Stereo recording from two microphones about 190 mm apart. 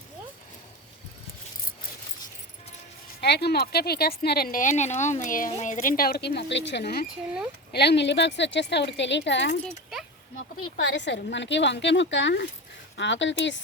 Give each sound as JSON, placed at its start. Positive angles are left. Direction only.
{"t": 3.2, "sound": "speech", "side_deg": 60}
{"t": 10.8, "sound": "speech", "side_deg": 65}